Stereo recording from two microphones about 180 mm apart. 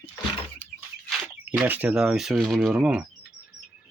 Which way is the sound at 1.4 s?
10° right (ahead or behind).